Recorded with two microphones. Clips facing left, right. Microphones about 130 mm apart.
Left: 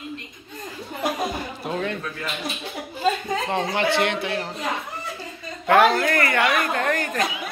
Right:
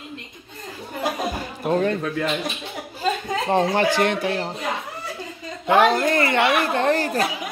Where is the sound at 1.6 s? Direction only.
40° right (ahead or behind).